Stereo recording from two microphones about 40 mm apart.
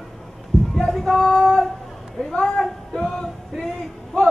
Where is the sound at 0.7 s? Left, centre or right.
Centre.